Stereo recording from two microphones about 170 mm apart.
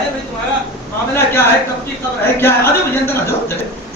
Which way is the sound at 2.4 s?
15° left (ahead or behind).